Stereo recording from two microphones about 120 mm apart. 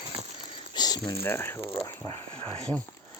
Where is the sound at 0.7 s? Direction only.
35° left (ahead or behind).